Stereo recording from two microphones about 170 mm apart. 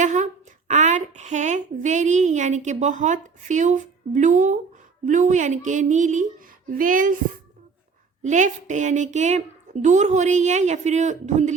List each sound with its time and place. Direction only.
0.0 s a sound: 45° right (ahead or behind)
0.7 s a woman's voice: 45° right (ahead or behind)
8.2 s a woman's voice: 45° right (ahead or behind)